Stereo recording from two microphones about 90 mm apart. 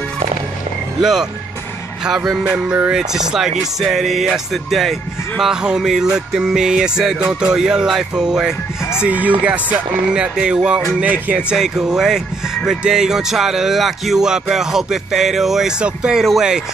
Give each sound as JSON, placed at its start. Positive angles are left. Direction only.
{"t": 2.0, "sound": "speech", "side_deg": -5}
{"t": 2.4, "sound": "music", "side_deg": -15}
{"t": 3.0, "sound": "speech", "side_deg": -5}
{"t": 5.4, "sound": "music", "side_deg": -10}
{"t": 11.5, "sound": "speech", "side_deg": -5}